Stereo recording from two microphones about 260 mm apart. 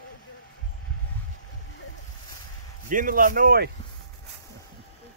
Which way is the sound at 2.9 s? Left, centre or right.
Right.